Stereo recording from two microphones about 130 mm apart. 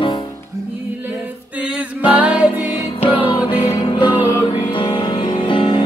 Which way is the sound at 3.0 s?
40° left (ahead or behind).